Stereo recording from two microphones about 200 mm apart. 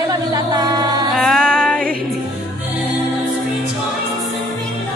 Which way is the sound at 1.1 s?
Centre (ahead or behind).